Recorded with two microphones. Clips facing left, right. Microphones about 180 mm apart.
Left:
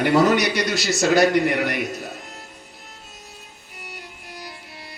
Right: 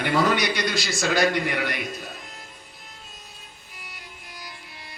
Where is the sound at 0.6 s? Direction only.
70° left (ahead or behind).